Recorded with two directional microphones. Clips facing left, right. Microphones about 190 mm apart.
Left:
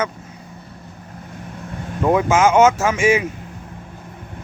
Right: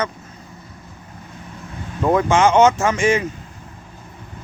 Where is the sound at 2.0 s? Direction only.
5° left (ahead or behind).